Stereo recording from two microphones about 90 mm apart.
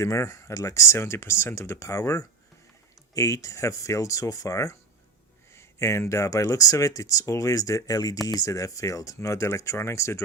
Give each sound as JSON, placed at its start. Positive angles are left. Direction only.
{"t": 0.0, "sound": "speech", "side_deg": 30}